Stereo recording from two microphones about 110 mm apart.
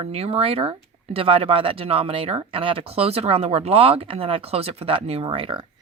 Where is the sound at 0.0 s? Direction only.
65° right (ahead or behind); by 5.6 s 50° right (ahead or behind).